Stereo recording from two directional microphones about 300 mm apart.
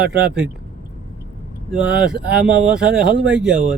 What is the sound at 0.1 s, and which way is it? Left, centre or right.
Speech, centre.